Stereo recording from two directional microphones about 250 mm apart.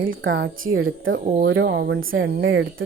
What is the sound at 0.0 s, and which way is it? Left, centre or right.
Speech, right.